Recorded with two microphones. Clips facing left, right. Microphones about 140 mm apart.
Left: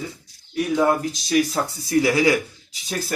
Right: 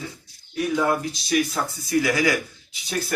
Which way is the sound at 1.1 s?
35° left (ahead or behind).